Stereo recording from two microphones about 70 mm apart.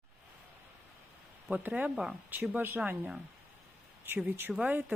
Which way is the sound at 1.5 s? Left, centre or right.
Right.